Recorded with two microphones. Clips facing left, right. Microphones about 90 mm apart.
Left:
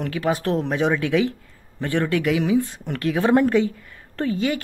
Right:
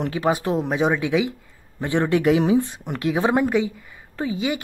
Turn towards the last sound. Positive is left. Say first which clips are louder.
# left 2 dB
turn(degrees=-15)  # may be behind; listen again after turning